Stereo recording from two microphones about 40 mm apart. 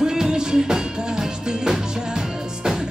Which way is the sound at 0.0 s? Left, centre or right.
Centre.